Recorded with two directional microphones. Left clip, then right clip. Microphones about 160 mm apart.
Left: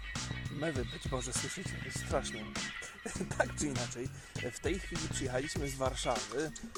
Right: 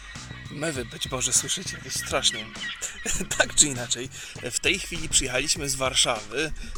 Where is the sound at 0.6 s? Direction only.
25° right (ahead or behind).